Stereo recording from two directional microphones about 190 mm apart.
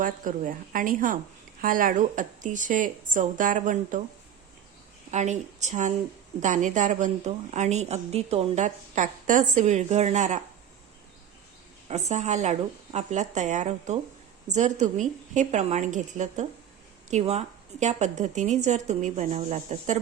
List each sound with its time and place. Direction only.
0.0 s speech: 45° right (ahead or behind)
5.1 s a woman's voice: 40° right (ahead or behind)
11.9 s a woman's voice: 35° right (ahead or behind)